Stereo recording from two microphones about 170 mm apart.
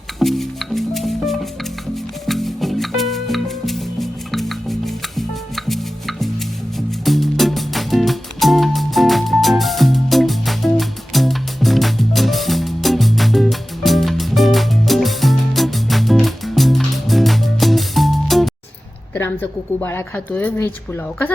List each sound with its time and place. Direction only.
0.2 s music: centre (ahead or behind)
19.1 s speech: 10° left (ahead or behind)